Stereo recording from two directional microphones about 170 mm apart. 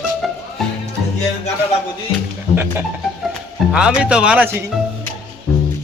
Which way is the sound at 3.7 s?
5° right (ahead or behind).